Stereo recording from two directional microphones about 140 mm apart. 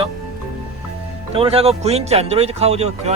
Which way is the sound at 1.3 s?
45° right (ahead or behind).